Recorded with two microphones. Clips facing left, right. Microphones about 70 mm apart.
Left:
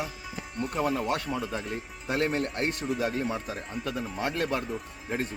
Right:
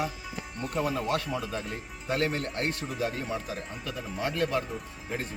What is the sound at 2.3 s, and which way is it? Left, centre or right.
Speech, left.